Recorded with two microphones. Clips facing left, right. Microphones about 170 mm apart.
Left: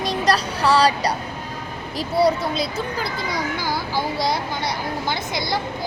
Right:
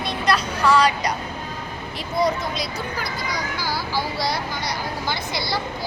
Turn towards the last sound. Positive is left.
turn(degrees=20)  # may be behind; listen again after turning